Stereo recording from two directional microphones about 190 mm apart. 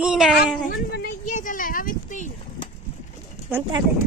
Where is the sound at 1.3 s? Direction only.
40° left (ahead or behind).